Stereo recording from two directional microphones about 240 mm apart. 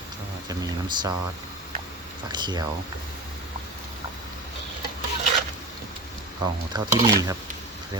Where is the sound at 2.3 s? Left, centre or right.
Centre.